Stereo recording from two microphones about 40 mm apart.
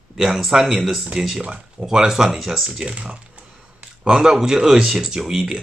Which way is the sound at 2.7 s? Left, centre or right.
Right.